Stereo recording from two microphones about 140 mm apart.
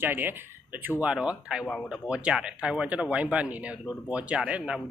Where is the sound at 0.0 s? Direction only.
15° right (ahead or behind).